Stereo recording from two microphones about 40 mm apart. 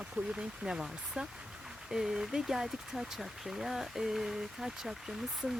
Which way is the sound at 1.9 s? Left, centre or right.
Centre.